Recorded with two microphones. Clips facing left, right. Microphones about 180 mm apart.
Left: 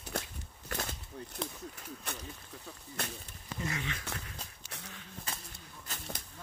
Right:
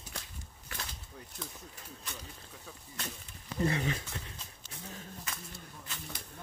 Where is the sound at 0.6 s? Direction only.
50° left (ahead or behind).